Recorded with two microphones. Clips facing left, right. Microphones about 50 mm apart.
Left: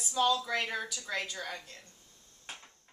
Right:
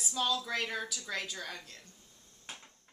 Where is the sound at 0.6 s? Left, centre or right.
Centre.